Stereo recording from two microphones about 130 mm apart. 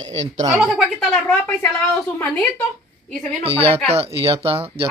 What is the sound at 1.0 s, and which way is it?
A woman's voice, 5° left (ahead or behind).